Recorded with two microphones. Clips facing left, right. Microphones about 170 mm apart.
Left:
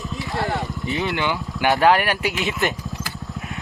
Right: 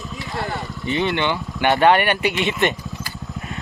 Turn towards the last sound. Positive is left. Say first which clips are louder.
# right 1 dB
turn(degrees=0)  # may be behind; listen again after turning